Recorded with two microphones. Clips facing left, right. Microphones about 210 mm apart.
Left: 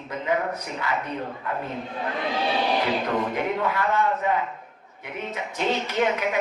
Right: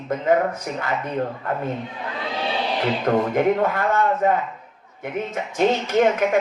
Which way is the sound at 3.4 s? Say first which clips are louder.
Right 6 dB; 50° right (ahead or behind).